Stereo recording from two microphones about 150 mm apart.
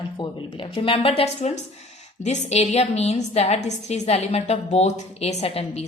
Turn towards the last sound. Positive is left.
turn(degrees=40)  # may be behind; listen again after turning